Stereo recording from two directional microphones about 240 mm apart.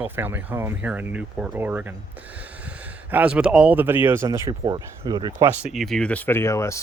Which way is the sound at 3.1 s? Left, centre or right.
Centre.